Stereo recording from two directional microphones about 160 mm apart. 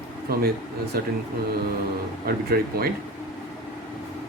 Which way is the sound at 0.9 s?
70° right (ahead or behind).